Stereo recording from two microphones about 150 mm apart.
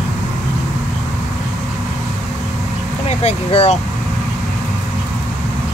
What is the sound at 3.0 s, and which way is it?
Speech, 45° left (ahead or behind).